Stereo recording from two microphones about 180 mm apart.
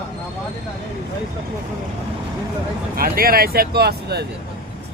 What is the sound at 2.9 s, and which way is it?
Speech, 55° right (ahead or behind).